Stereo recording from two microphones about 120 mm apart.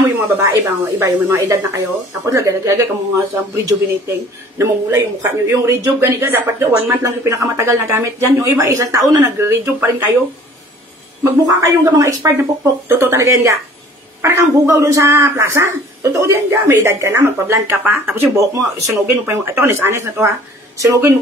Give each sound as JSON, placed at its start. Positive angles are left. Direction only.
{"t": 0.4, "sound": "speech", "side_deg": -25}
{"t": 11.2, "sound": "speech", "side_deg": -30}